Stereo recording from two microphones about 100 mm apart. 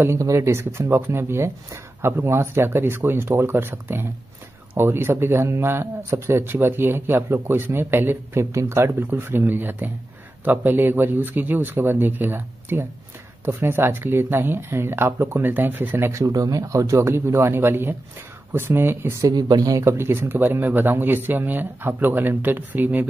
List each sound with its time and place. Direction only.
0.0 s speech: 30° right (ahead or behind)
19.2 s speech: 40° right (ahead or behind); by 23.0 s 20° right (ahead or behind)